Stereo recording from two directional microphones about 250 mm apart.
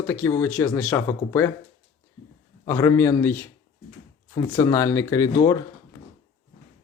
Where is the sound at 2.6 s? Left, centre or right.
Centre.